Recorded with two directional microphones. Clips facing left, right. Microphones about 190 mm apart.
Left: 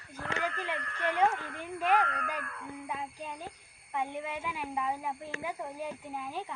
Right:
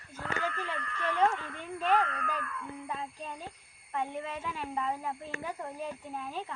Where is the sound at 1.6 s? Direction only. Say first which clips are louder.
Even; 10° left (ahead or behind).